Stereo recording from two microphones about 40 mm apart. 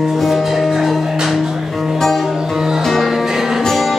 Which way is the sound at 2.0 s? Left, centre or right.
Centre.